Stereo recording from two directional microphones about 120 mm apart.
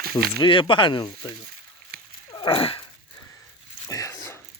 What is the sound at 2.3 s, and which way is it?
Dog, 45° left (ahead or behind).